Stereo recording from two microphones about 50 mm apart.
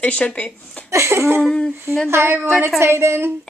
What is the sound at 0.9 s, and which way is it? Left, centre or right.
A woman's voice, right.